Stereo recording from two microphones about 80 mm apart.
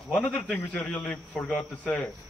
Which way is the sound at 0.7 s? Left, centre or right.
Centre.